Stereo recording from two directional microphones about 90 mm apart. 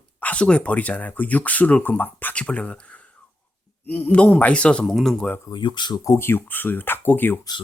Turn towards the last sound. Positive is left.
turn(degrees=20)  # may be behind; listen again after turning